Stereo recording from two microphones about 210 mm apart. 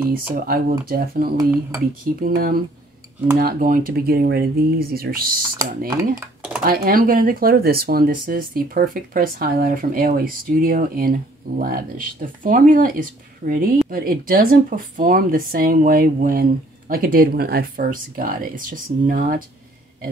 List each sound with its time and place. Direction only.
0.3 s speech: 45° right (ahead or behind)
1.3 s dishes: 15° right (ahead or behind)
2.1 s speech: 40° right (ahead or behind)
6.6 s speech: 45° right (ahead or behind)